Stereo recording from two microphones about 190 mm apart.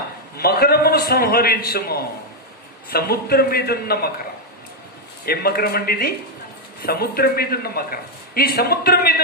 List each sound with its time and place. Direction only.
0.3 s a man's voice: 55° left (ahead or behind)
5.2 s speech: 55° left (ahead or behind)